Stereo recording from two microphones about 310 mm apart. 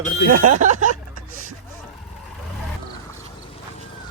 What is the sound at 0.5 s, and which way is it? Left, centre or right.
Speech, right.